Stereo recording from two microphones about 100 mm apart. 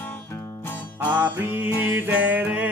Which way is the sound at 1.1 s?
15° right (ahead or behind).